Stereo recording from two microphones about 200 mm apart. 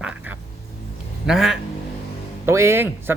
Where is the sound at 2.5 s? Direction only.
15° right (ahead or behind).